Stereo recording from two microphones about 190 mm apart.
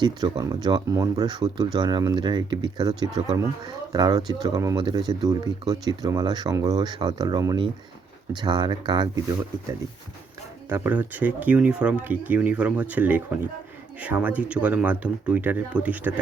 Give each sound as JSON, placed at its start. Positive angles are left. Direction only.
{"t": 0.0, "sound": "speech", "side_deg": -20}
{"t": 10.7, "sound": "speech", "side_deg": -10}